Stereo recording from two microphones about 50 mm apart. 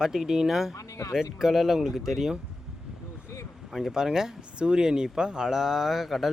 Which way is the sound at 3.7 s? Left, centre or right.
Centre.